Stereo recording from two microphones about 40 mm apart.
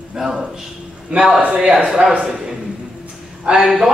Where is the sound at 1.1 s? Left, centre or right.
Right.